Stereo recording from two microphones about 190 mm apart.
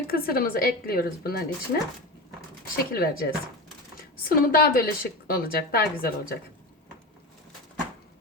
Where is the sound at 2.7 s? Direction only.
50° left (ahead or behind).